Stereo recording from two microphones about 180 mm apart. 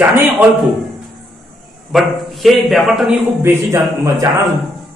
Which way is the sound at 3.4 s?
15° right (ahead or behind).